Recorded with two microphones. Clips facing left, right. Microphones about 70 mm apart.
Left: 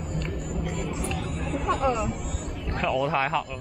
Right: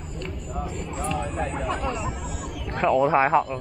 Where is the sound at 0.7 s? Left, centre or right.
Left.